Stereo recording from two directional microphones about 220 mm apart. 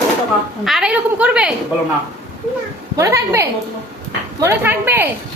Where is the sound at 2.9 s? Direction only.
15° right (ahead or behind).